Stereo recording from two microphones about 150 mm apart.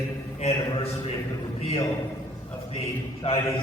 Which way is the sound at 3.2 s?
40° left (ahead or behind).